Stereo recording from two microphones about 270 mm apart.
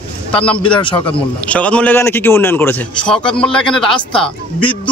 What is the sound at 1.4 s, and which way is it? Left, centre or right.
A man's voice, centre.